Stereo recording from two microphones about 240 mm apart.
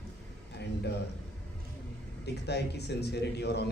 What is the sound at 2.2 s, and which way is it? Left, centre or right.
Speech, left.